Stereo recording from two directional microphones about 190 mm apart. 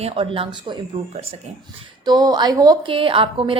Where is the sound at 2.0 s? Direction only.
20° right (ahead or behind).